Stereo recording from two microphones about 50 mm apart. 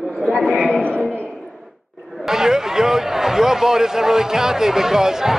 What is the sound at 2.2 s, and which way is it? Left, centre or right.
Speech, centre.